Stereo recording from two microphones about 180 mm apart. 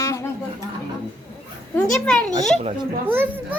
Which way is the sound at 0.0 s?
15° left (ahead or behind).